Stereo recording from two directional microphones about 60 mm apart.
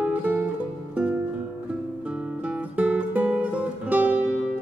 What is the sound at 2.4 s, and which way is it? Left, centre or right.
Music, right.